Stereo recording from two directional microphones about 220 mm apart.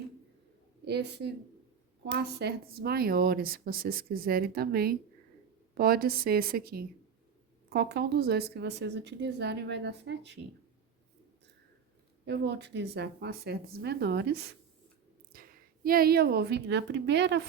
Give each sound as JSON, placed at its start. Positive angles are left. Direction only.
{"t": 0.9, "sound": "a woman's voice", "side_deg": -50}
{"t": 12.2, "sound": "a woman's voice", "side_deg": -50}